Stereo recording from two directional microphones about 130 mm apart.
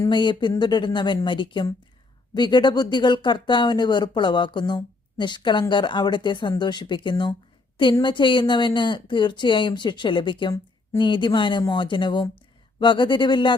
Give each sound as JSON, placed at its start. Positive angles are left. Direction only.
{"t": 0.1, "sound": "speech", "side_deg": 35}